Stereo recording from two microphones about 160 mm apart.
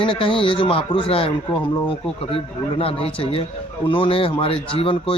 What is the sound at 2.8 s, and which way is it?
Speech, 35° left (ahead or behind).